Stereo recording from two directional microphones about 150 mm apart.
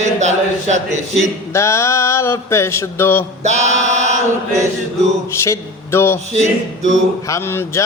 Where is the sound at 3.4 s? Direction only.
50° right (ahead or behind).